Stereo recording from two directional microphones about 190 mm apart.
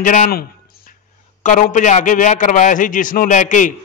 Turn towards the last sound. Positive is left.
turn(degrees=40)  # may be behind; listen again after turning